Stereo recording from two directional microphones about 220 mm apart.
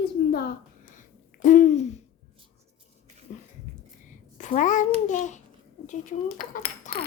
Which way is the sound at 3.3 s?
35° left (ahead or behind).